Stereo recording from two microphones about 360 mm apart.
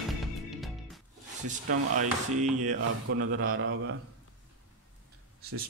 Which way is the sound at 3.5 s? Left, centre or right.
Right.